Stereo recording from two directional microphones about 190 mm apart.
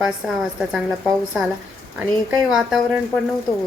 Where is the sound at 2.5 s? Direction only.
Centre (ahead or behind).